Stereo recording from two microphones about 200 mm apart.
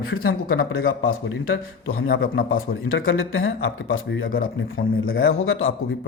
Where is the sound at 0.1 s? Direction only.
50° left (ahead or behind).